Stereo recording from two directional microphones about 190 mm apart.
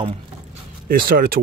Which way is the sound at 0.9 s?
50° right (ahead or behind).